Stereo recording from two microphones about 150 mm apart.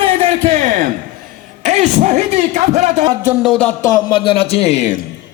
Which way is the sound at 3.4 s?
10° left (ahead or behind).